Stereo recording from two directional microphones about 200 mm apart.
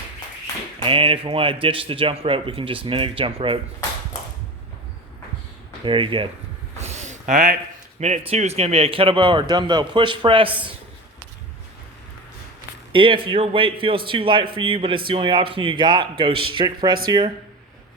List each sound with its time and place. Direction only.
0.8 s a man's voice: 25° right (ahead or behind)
5.8 s a man's voice: 25° right (ahead or behind)
6.7 s a sound: 35° right (ahead or behind)
7.9 s a man's voice: 35° right (ahead or behind)
12.9 s a man's voice: 25° right (ahead or behind)